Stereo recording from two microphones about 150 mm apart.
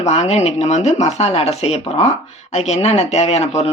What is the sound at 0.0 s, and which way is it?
Speech, 45° left (ahead or behind).